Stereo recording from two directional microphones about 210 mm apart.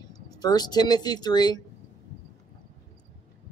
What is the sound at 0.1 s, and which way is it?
Speech, 20° left (ahead or behind).